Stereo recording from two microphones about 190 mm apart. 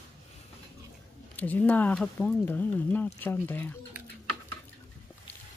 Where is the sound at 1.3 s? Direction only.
10° left (ahead or behind).